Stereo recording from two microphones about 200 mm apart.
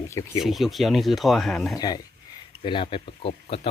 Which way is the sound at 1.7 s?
20° left (ahead or behind).